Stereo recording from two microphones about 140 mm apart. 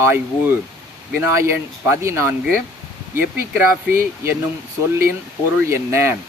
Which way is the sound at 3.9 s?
15° right (ahead or behind).